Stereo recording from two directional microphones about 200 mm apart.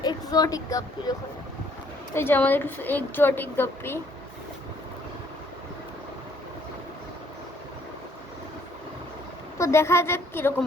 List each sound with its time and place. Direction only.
0.0 s speech: 20° left (ahead or behind)
2.1 s a woman's voice: 10° left (ahead or behind)
9.6 s a woman's voice: 15° left (ahead or behind)